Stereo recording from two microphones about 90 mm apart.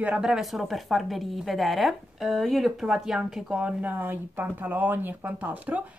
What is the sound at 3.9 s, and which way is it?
Speech, 20° right (ahead or behind).